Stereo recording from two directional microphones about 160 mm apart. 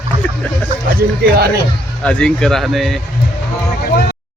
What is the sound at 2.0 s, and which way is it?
Speech, 5° left (ahead or behind).